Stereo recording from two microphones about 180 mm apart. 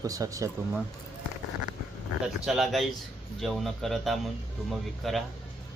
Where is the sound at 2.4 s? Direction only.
Centre (ahead or behind).